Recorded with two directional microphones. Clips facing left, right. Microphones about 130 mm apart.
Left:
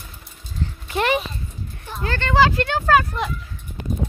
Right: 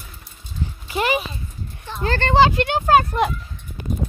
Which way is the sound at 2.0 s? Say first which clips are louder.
Right 2 dB; 35° right (ahead or behind).